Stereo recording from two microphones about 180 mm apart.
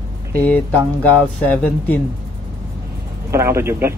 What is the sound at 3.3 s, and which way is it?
Speech, 15° right (ahead or behind).